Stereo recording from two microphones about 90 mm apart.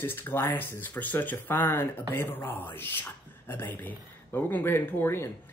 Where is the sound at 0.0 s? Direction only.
25° left (ahead or behind).